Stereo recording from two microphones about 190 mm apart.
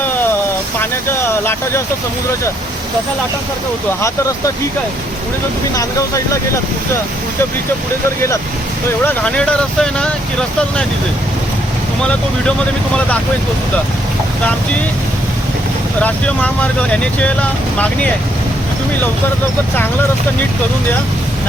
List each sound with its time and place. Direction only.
0.8 s speech: 10° left (ahead or behind)
5.7 s speech: 15° left (ahead or behind)
9.0 s speech: 5° left (ahead or behind)
16.0 s speech: 5° left (ahead or behind)